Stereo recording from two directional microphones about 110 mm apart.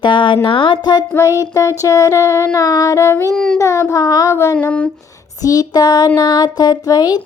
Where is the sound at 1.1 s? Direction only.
30° left (ahead or behind).